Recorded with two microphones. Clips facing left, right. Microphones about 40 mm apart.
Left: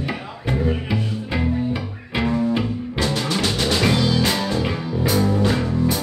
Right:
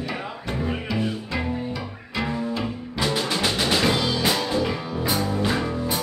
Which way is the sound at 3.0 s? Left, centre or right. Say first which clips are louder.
Left 1 dB; centre.